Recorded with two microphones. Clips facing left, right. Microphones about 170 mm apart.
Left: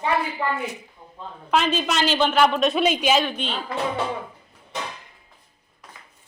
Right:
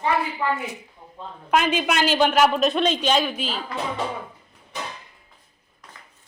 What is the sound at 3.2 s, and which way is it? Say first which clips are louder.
Speech: even; 5° right (ahead or behind).